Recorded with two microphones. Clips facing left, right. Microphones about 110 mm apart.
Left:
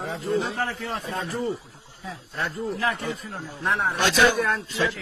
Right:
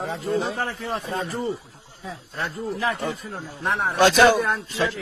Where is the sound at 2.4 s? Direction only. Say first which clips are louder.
Even; 15° right (ahead or behind).